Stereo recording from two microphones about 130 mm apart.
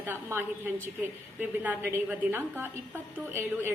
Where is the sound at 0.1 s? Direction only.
15° right (ahead or behind).